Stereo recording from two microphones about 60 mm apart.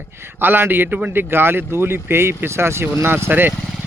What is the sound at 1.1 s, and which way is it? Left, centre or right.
Speech, right.